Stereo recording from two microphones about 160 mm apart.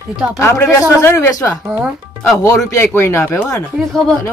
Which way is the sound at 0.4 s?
15° left (ahead or behind).